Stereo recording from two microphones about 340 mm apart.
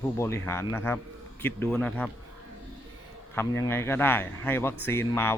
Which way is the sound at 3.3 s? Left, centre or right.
Centre.